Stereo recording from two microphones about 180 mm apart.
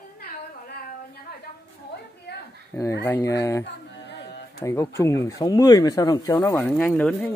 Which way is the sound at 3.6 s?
75° left (ahead or behind).